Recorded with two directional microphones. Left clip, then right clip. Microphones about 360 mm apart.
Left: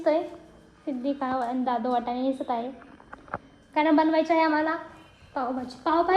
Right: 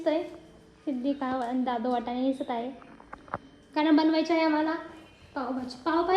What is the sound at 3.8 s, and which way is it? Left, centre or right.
Speech, centre.